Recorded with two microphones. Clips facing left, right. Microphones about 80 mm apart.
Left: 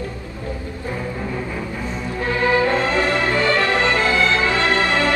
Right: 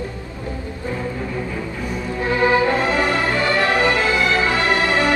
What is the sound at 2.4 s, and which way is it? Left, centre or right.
Music, centre.